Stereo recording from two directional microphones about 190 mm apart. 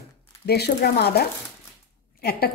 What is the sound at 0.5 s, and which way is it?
Speech, 55° left (ahead or behind).